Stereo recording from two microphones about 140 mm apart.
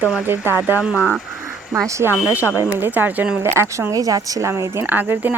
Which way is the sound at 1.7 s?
20° right (ahead or behind).